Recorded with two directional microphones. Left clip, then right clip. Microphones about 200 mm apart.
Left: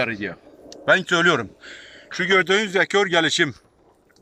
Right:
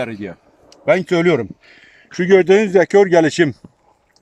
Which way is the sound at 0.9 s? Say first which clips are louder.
Right 3 dB; 25° right (ahead or behind).